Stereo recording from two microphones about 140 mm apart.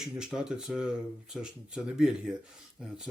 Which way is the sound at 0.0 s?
5° right (ahead or behind).